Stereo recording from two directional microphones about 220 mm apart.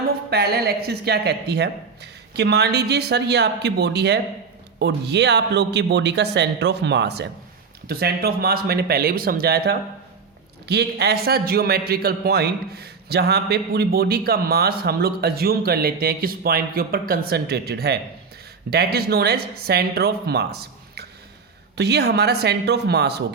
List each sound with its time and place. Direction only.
0.3 s a man's voice: 45° right (ahead or behind)